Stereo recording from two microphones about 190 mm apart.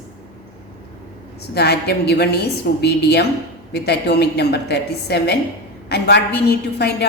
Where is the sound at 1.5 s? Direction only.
60° left (ahead or behind).